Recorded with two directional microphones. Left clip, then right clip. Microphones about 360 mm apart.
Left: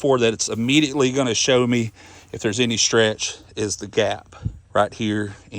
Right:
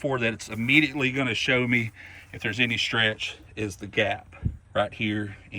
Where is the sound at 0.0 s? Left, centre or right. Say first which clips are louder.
Left 9 dB; centre.